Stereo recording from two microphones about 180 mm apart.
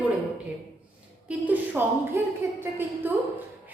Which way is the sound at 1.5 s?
10° right (ahead or behind).